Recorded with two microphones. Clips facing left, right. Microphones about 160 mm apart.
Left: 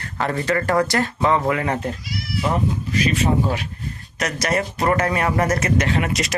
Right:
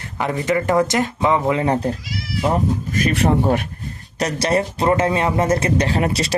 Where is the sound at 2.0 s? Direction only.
90° right.